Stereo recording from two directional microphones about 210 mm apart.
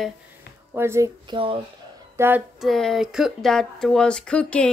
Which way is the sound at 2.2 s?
10° right (ahead or behind).